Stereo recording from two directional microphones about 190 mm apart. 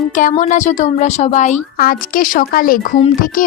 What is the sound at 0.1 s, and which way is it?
Speech, 40° left (ahead or behind).